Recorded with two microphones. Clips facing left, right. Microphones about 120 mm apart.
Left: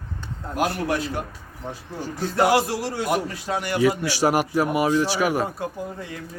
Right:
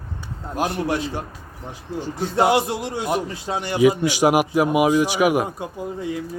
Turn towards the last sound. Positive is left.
turn(degrees=-20)  # may be behind; listen again after turning